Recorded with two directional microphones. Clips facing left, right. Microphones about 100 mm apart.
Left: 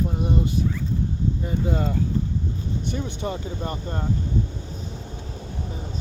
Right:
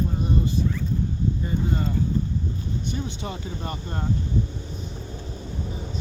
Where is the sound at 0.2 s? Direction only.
70° left (ahead or behind).